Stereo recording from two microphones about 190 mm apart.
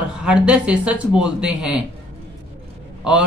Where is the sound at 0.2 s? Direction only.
5° right (ahead or behind).